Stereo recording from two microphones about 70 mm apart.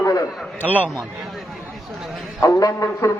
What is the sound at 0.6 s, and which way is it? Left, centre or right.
Speech, right.